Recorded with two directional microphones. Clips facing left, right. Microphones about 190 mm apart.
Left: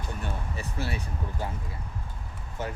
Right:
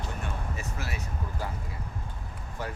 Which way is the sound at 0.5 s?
30° left (ahead or behind).